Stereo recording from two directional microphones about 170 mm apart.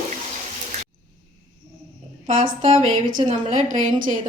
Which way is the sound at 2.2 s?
40° right (ahead or behind).